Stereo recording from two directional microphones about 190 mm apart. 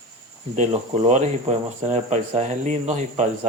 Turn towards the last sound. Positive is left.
turn(degrees=-40)  # may be behind; listen again after turning